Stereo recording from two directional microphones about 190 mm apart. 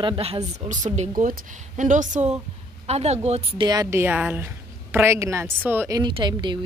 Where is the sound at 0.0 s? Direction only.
30° right (ahead or behind).